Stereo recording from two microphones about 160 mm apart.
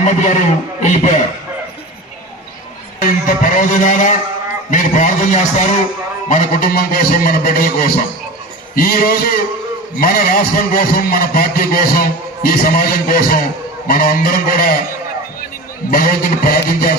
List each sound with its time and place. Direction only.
0.0 s a man's voice: 50° left (ahead or behind)
3.5 s a man's voice: 50° left (ahead or behind)
15.9 s a man's voice: 65° left (ahead or behind)